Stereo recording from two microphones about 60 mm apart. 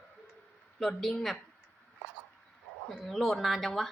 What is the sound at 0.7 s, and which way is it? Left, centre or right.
Speech, centre.